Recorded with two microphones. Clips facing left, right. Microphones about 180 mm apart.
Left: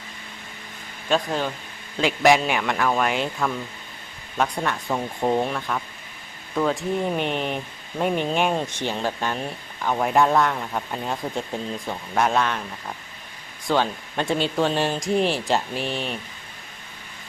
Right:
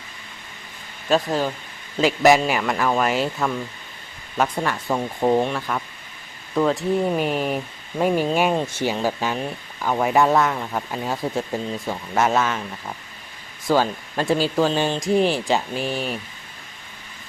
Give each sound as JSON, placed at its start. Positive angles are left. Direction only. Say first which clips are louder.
{"t": 1.1, "sound": "speech", "louder": "right 3 dB", "side_deg": -5}